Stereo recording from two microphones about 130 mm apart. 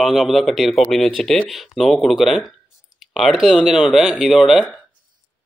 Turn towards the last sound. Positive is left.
turn(degrees=-5)  # may be behind; listen again after turning